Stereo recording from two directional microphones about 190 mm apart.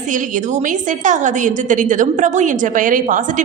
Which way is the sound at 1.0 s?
40° right (ahead or behind).